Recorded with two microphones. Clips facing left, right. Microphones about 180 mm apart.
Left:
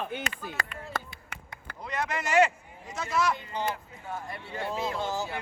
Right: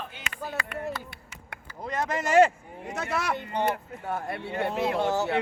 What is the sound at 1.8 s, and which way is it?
Speech, 45° right (ahead or behind).